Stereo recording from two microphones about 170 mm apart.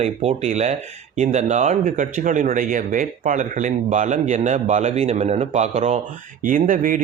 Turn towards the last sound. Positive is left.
turn(degrees=-55)  # may be behind; listen again after turning